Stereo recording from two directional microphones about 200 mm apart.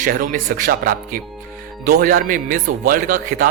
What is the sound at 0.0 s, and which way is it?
A man's voice, 45° right (ahead or behind).